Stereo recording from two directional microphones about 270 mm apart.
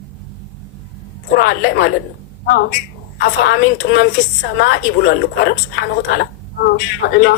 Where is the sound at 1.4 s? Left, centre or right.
Left.